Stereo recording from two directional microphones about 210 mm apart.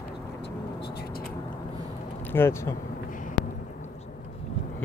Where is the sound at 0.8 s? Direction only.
50° left (ahead or behind).